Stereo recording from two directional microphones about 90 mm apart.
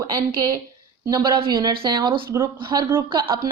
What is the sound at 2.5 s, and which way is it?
Speech, 60° right (ahead or behind).